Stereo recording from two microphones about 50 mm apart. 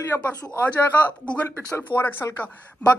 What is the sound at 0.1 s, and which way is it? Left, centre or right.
Speech, left.